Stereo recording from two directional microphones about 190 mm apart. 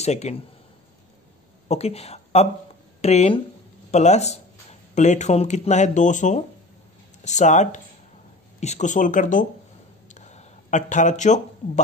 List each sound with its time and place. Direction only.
0.0 s speech: 35° left (ahead or behind)
1.7 s a woman's voice: 35° left (ahead or behind)
10.0 s a sound: 40° left (ahead or behind)